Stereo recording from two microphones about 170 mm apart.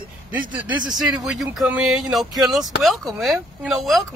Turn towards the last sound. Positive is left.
turn(degrees=0)  # may be behind; listen again after turning